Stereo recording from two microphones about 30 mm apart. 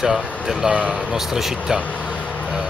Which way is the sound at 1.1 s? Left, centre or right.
Centre.